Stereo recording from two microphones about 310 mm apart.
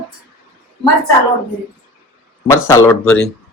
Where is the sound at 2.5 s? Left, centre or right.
Centre.